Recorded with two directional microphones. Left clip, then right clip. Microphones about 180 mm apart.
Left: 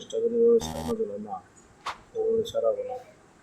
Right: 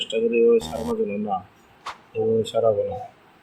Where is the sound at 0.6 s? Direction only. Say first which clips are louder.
Right 4 dB; centre (ahead or behind).